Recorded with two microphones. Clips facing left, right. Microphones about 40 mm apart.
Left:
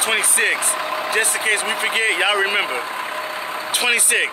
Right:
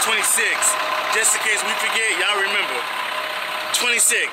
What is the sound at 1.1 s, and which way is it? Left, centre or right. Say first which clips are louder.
Speech: left 3 dB; centre.